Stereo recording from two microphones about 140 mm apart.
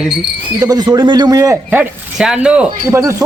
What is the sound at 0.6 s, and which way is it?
Speech, 30° right (ahead or behind).